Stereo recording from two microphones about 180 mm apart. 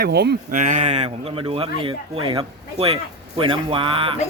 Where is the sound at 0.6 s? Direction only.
40° right (ahead or behind).